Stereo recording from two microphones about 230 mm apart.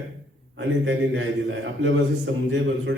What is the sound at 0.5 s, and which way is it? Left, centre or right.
A man's voice, right.